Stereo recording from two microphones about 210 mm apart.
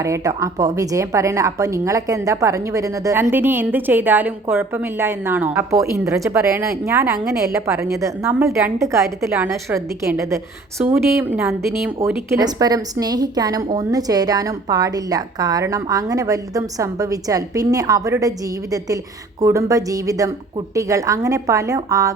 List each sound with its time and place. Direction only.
0.0 s a woman's voice: 15° right (ahead or behind)
12.3 s a woman's voice: 15° right (ahead or behind)